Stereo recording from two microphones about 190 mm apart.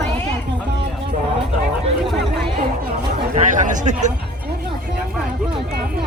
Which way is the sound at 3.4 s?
40° right (ahead or behind).